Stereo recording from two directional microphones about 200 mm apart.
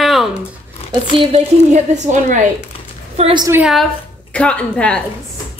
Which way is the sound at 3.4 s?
10° right (ahead or behind).